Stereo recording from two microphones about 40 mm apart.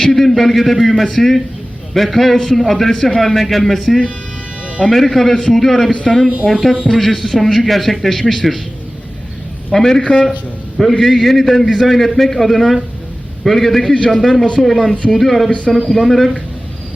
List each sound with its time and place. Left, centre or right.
0.0 s a man's voice: centre
9.7 s a man's voice: centre
10.8 s a man's voice: centre
13.9 s a man's voice: left
14.2 s a man's voice: centre